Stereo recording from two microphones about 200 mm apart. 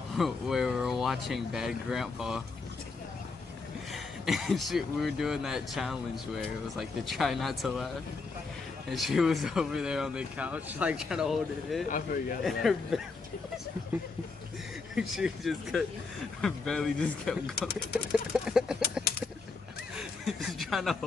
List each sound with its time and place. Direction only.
0.1 s speech: centre (ahead or behind)
3.9 s speech: centre (ahead or behind)
8.9 s speech: centre (ahead or behind)
11.9 s speech: 45° left (ahead or behind)
12.4 s speech: centre (ahead or behind)
15.0 s speech: 5° right (ahead or behind)
18.3 s a sound: centre (ahead or behind)
20.0 s chuckle: centre (ahead or behind)